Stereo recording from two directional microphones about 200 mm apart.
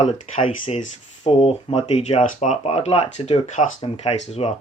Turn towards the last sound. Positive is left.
turn(degrees=35)  # may be behind; listen again after turning